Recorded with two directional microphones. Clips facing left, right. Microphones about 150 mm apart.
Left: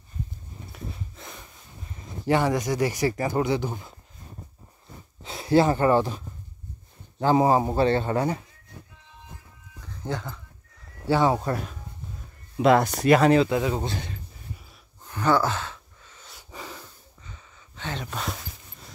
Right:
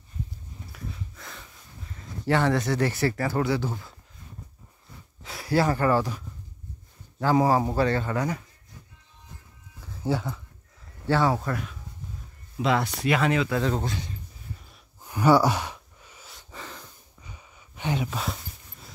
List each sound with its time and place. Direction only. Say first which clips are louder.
0.7 s a sound: left 1 dB; 25° left (ahead or behind)
2.0 s speech: left 1 dB; 20° left (ahead or behind)
5.2 s a man's voice: left 4 dB; 25° left (ahead or behind)
10.0 s speech: right 4 dB; 5° right (ahead or behind)
11.1 s a man's voice: left 2 dB; 15° left (ahead or behind)
12.5 s speech: left 6 dB; 50° left (ahead or behind)
13.5 s speech: left 1 dB; 10° left (ahead or behind)
13.9 s speech: left 1 dB; 70° left (ahead or behind)
15.0 s a sound: right 3 dB; 10° right (ahead or behind)
16.3 s breathing: left 2 dB; 10° left (ahead or behind)
17.2 s a sound: even; 15° right (ahead or behind)